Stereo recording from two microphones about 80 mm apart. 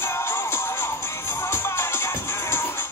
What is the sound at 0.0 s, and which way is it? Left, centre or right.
Music, left.